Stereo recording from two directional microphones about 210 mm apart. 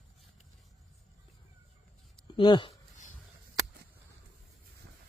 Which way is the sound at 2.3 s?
20° left (ahead or behind).